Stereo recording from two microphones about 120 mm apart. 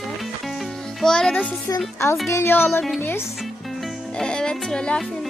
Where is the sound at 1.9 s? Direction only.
20° left (ahead or behind).